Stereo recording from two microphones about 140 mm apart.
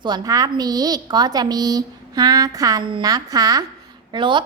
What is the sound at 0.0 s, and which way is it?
A child's voice, 30° right (ahead or behind).